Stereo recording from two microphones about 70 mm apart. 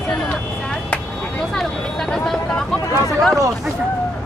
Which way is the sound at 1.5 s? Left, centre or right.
Centre.